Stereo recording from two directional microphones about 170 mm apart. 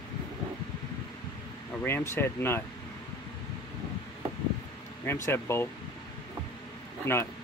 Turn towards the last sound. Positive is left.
turn(degrees=15)  # may be behind; listen again after turning